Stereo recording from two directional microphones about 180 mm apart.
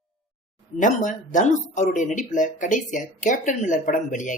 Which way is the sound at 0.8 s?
45° left (ahead or behind).